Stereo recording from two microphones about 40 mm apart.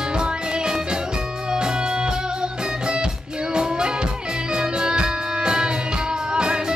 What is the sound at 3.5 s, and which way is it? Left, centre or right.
Music, right.